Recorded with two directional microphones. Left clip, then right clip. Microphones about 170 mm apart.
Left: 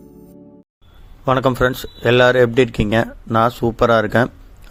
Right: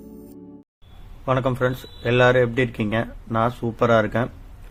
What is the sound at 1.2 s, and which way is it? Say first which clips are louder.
Speech: left 6 dB; 50° left (ahead or behind).